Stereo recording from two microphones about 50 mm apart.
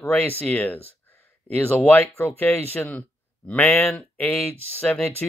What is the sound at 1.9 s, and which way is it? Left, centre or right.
A man's voice, left.